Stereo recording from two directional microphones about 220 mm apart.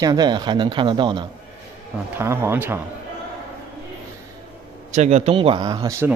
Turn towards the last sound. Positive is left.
turn(degrees=-15)  # may be behind; listen again after turning